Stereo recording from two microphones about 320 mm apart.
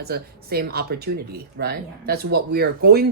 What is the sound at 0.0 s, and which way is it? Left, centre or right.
Speech, right.